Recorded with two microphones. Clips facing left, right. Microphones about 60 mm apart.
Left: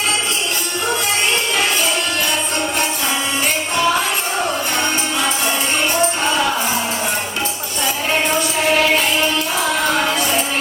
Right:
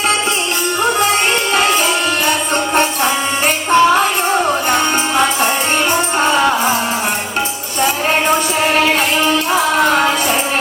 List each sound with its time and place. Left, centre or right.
0.9 s music: right
3.4 s music: right